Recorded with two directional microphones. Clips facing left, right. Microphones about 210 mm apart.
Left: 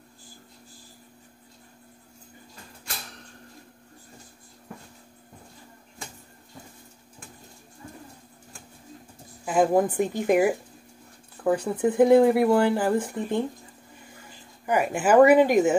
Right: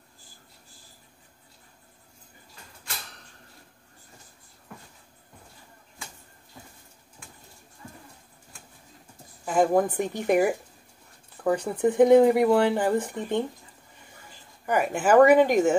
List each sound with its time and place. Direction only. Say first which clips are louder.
9.4 s a woman's voice: left 1 dB; 5° left (ahead or behind)
11.4 s speech: even; centre (ahead or behind)
14.7 s speech: even; 5° left (ahead or behind)